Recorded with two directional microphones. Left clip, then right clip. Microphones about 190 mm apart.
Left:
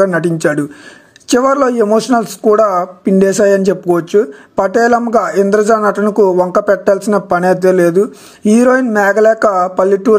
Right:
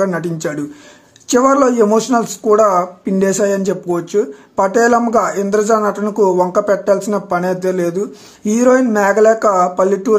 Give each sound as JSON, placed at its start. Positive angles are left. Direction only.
{"t": 0.0, "sound": "speech", "side_deg": 30}